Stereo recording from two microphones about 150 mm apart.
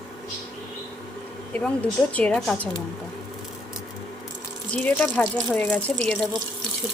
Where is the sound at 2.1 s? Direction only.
10° left (ahead or behind).